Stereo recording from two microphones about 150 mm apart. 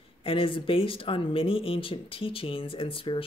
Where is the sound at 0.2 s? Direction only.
35° left (ahead or behind).